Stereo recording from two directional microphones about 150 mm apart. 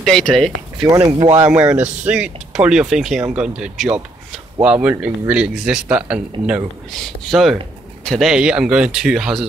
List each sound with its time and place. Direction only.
0.0 s speech: 5° left (ahead or behind)
0.9 s speech: 25° right (ahead or behind)
1.5 s speech: 10° right (ahead or behind)